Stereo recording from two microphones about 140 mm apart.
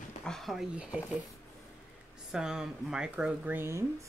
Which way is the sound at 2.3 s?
5° right (ahead or behind).